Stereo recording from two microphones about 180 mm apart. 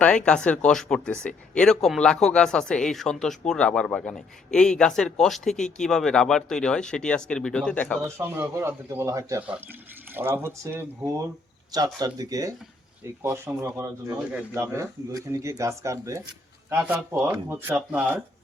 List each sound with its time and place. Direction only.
0.0 s speech: 5° left (ahead or behind)
8.0 s speech: 15° right (ahead or behind)